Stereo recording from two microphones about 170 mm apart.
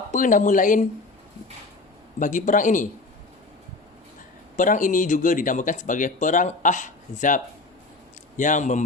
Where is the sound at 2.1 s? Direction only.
50° left (ahead or behind).